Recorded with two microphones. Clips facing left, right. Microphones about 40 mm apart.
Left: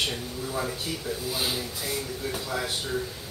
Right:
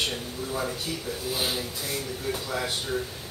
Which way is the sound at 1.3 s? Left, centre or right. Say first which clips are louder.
Right 2 dB; centre.